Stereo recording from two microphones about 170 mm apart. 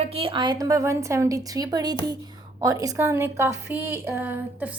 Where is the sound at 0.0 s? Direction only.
35° right (ahead or behind).